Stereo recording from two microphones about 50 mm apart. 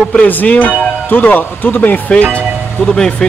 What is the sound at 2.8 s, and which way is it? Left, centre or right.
Speech, centre.